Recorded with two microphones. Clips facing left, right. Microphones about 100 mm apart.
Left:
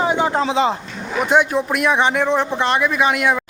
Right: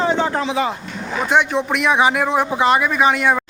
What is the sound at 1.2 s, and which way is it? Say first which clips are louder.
A man's voice: left 1 dB; 5° left (ahead or behind).